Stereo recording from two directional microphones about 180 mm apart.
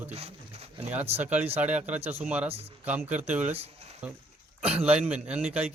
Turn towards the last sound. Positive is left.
turn(degrees=-5)  # may be behind; listen again after turning